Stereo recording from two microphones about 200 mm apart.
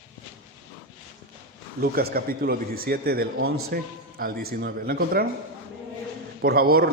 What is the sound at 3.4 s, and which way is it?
Speech, 90° right.